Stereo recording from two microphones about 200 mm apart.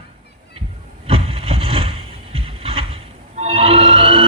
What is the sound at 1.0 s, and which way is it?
Vehicle, 30° right (ahead or behind).